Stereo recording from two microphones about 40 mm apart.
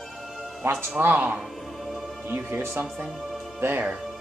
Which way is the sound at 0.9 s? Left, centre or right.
Right.